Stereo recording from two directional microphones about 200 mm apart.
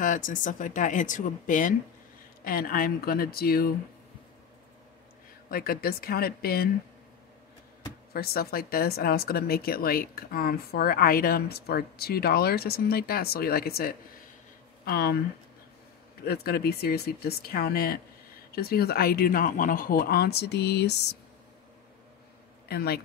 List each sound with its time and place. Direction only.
0.0 s speech: 40° left (ahead or behind)
5.5 s speech: 50° left (ahead or behind)
8.1 s speech: 50° left (ahead or behind)
16.3 s speech: 50° left (ahead or behind)
22.7 s speech: 50° left (ahead or behind)